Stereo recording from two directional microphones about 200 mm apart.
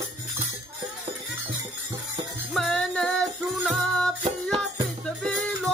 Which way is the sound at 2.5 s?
Centre (ahead or behind).